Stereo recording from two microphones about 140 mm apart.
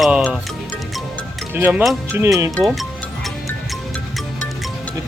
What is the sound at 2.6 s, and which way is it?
Music, centre (ahead or behind).